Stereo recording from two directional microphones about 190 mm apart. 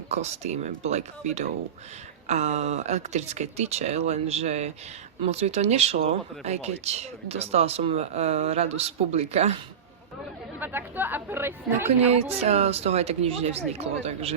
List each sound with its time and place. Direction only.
0.1 s speech: 35° right (ahead or behind)
10.6 s speech: 10° right (ahead or behind)
12.4 s speech: 35° right (ahead or behind)